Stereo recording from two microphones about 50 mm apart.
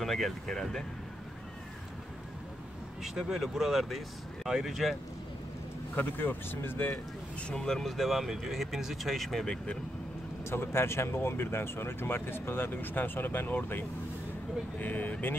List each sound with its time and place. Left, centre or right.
0.0 s speech: centre
3.0 s speech: centre
5.9 s speech: left
7.5 s speech: centre
10.4 s speech: left
14.8 s speech: left